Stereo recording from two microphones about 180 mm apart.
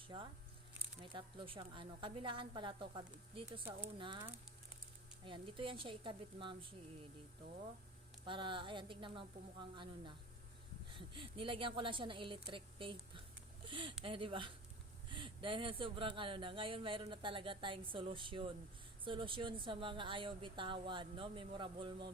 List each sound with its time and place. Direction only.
0.1 s speech: 25° right (ahead or behind)
8.2 s speech: 25° right (ahead or behind)